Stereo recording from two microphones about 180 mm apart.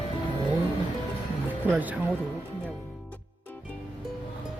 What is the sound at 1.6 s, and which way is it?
Speech, 10° right (ahead or behind).